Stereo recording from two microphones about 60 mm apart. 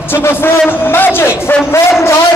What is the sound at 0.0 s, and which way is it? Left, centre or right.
A man's voice, left.